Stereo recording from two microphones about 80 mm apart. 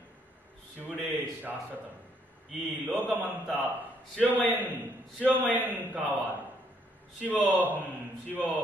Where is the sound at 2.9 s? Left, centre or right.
Right.